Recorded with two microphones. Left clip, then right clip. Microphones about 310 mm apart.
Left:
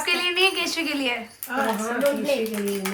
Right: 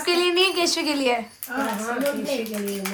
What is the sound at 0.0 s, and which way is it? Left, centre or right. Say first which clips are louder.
A woman's voice: right 1 dB; centre.